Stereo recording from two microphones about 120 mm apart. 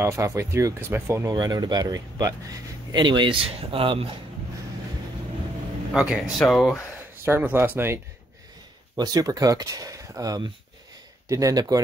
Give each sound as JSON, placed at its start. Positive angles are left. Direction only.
{"t": 0.0, "sound": "speech", "side_deg": -25}
{"t": 1.3, "sound": "speech", "side_deg": -35}
{"t": 5.9, "sound": "speech", "side_deg": -5}
{"t": 7.0, "sound": "speech", "side_deg": -20}
{"t": 8.9, "sound": "speech", "side_deg": -35}